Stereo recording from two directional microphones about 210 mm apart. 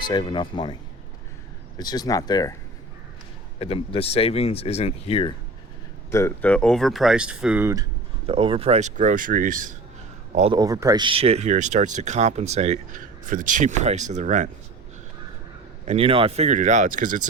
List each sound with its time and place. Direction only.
0.1 s speech: 20° left (ahead or behind)
1.8 s speech: 20° left (ahead or behind)
3.6 s speech: 25° left (ahead or behind)
6.1 s speech: 10° left (ahead or behind); by 7.9 s 10° right (ahead or behind)
8.3 s speech: 25° right (ahead or behind)
10.6 s speech: 15° right (ahead or behind); by 14.5 s 35° right (ahead or behind)
15.9 s speech: 25° right (ahead or behind)